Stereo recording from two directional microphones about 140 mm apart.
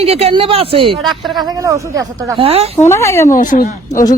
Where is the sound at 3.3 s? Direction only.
70° left (ahead or behind).